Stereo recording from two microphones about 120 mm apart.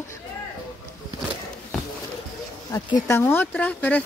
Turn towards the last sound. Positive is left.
turn(degrees=10)  # may be behind; listen again after turning